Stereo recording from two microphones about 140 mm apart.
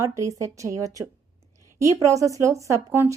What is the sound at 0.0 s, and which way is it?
A woman's voice, 20° right (ahead or behind).